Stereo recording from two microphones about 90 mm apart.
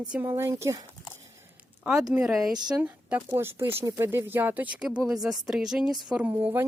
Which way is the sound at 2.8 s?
15° right (ahead or behind).